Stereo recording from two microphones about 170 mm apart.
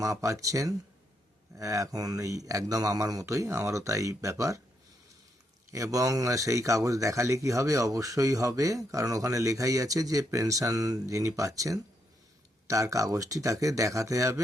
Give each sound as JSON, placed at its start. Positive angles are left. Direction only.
{"t": 0.0, "sound": "a man's voice", "side_deg": -20}
{"t": 5.7, "sound": "a man's voice", "side_deg": -20}